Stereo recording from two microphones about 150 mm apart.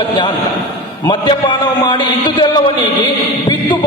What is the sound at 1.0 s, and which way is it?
A man's voice, 30° left (ahead or behind).